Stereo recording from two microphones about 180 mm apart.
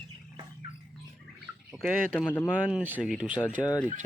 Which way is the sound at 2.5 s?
5° right (ahead or behind).